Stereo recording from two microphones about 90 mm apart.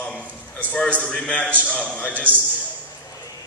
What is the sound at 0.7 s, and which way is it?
A man's voice, 15° left (ahead or behind).